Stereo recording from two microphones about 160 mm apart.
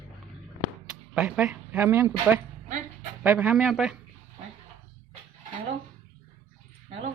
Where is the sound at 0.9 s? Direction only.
5° right (ahead or behind).